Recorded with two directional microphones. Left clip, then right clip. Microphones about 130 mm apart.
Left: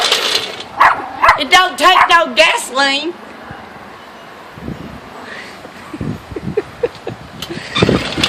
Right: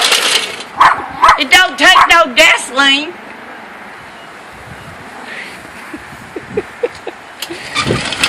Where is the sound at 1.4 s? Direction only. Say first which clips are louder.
Right 2 dB; 40° left (ahead or behind); by 3.1 s 55° left (ahead or behind).